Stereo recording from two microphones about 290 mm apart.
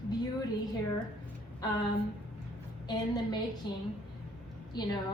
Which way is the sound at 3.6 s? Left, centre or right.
Centre.